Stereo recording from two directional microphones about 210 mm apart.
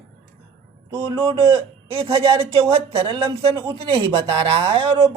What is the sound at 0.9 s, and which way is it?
Speech, 15° right (ahead or behind).